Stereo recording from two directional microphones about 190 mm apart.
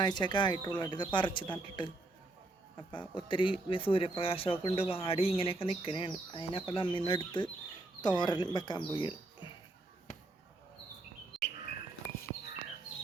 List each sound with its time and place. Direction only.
0.0 s speech: 25° left (ahead or behind)
2.9 s speech: 25° left (ahead or behind)
11.3 s chirp: centre (ahead or behind)